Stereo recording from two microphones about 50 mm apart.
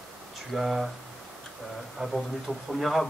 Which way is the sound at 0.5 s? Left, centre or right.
Centre.